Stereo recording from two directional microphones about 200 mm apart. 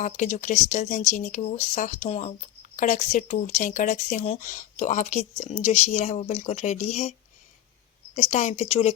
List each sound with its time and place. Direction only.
0.0 s speech: 35° left (ahead or behind)